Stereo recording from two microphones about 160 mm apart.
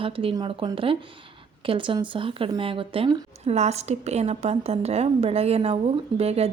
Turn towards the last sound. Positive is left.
turn(degrees=-40)  # may be behind; listen again after turning